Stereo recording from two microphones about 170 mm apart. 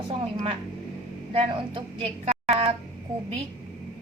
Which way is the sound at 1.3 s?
30° right (ahead or behind).